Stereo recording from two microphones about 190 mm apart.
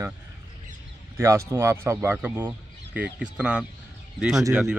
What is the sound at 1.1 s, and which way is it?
Speech, 15° right (ahead or behind).